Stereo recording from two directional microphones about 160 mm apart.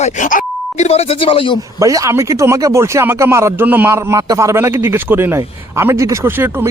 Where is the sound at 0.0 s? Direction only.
50° left (ahead or behind).